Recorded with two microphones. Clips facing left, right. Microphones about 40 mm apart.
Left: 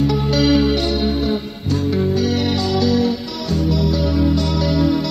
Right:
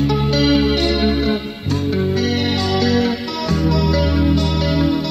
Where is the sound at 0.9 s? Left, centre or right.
Right.